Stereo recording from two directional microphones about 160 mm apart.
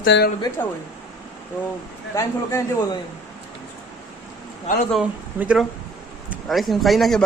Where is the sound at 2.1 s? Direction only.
20° left (ahead or behind).